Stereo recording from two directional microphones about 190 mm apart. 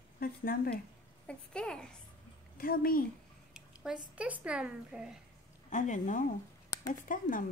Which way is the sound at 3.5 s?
5° right (ahead or behind).